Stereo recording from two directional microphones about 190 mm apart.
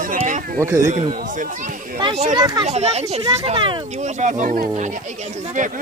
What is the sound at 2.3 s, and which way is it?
Speech, 20° right (ahead or behind).